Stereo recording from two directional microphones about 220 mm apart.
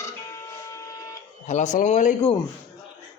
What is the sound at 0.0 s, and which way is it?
Printer, 15° left (ahead or behind).